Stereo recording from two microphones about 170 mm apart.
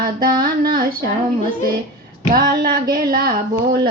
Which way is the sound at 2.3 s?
60° right (ahead or behind).